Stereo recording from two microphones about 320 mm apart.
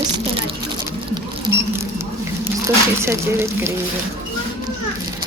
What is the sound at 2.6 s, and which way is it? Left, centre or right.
Speech, centre.